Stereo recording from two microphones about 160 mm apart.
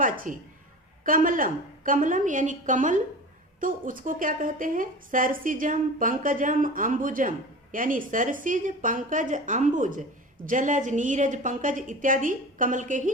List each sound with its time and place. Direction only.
0.0 s a woman's voice: 55° right (ahead or behind)